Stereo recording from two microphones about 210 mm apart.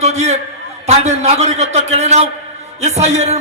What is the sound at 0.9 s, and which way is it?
A man's voice, 30° right (ahead or behind).